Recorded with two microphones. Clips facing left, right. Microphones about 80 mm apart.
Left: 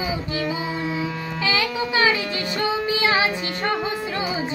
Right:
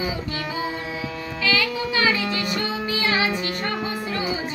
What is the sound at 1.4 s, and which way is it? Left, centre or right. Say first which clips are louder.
Music: even; left.